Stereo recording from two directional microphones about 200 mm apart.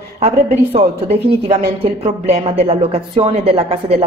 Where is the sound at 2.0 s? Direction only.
30° right (ahead or behind).